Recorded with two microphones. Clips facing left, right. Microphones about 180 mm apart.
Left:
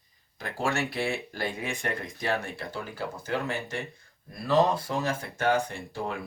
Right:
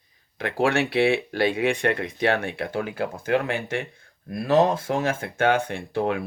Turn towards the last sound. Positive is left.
turn(degrees=-70)  # may be behind; listen again after turning